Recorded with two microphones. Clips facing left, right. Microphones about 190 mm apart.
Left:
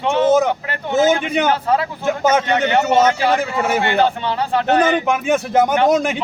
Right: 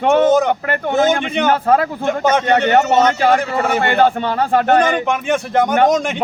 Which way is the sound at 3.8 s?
50° right (ahead or behind).